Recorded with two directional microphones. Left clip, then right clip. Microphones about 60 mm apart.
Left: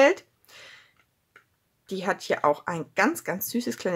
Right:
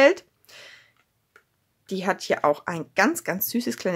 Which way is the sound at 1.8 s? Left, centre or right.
Right.